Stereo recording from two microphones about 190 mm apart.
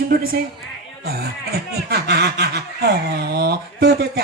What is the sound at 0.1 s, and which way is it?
A woman's voice, 50° right (ahead or behind).